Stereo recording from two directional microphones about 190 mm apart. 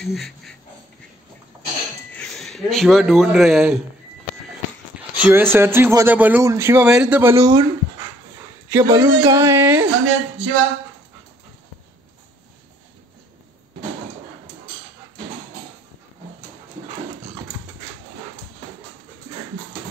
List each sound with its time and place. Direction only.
0.0 s a sound: centre (ahead or behind)
2.1 s speech: centre (ahead or behind)
4.9 s a man's voice: 10° right (ahead or behind)
8.7 s a man's voice: 20° right (ahead or behind)
10.0 s speech: 90° right